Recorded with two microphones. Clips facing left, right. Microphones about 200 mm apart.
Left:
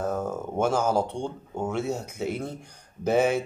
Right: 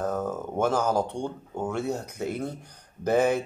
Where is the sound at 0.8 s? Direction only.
15° right (ahead or behind).